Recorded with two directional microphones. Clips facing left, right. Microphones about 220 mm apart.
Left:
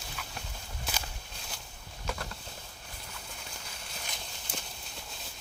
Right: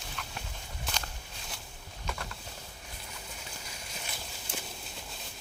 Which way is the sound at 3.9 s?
5° right (ahead or behind).